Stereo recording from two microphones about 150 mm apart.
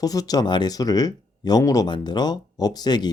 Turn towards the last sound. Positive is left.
turn(degrees=30)  # may be behind; listen again after turning